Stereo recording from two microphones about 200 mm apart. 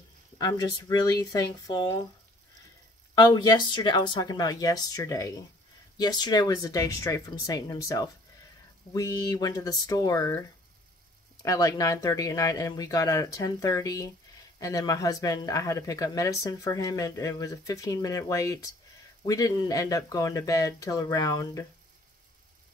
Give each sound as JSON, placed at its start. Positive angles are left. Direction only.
{"t": 0.4, "sound": "speech", "side_deg": 20}
{"t": 3.2, "sound": "speech", "side_deg": 20}
{"t": 11.4, "sound": "speech", "side_deg": 15}